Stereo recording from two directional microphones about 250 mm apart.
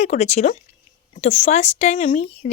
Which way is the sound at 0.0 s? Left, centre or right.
Left.